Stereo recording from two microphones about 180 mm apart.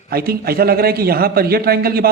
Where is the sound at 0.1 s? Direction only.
60° right (ahead or behind).